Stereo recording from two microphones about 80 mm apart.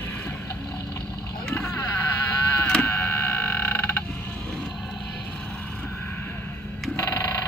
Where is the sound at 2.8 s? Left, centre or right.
Left.